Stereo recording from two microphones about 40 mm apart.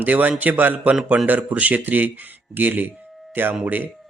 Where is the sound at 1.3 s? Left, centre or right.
Right.